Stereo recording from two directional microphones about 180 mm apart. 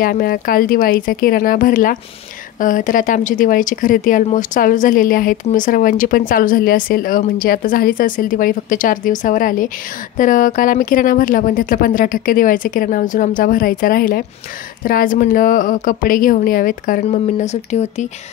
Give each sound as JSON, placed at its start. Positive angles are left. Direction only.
{"t": 0.0, "sound": "speech", "side_deg": 55}